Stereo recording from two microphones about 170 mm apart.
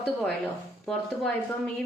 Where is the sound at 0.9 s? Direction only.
5° left (ahead or behind).